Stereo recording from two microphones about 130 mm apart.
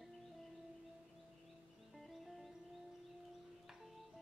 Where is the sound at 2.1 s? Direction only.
Centre (ahead or behind).